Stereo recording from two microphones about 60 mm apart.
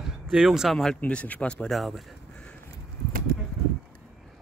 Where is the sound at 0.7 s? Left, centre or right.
Centre.